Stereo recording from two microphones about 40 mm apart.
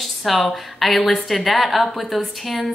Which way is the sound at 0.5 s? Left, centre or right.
Centre.